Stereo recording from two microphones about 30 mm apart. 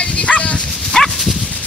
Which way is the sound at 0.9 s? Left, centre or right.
Centre.